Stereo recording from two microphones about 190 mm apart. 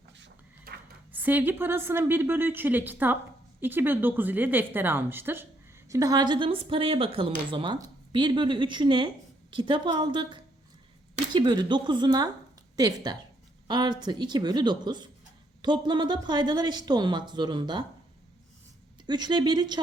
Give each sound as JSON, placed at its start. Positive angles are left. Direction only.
{"t": 0.2, "sound": "a sound", "side_deg": -55}
{"t": 1.1, "sound": "a woman's voice", "side_deg": -10}
{"t": 19.0, "sound": "speech", "side_deg": -25}